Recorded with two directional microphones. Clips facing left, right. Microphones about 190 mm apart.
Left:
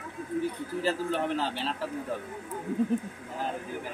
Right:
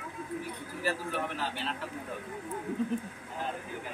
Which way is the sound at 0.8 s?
25° left (ahead or behind).